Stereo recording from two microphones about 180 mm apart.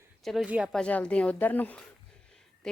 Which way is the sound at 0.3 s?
5° right (ahead or behind).